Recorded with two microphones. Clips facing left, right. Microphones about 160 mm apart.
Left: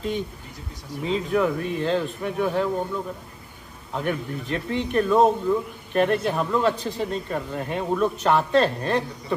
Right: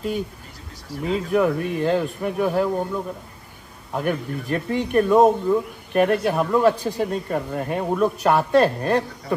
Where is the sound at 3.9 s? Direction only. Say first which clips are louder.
Right 3 dB; 10° right (ahead or behind).